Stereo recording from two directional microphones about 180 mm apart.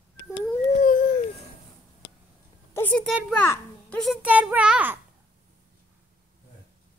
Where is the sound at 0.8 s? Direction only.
50° left (ahead or behind).